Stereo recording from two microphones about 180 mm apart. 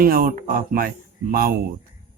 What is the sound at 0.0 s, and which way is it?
Speech, 50° right (ahead or behind).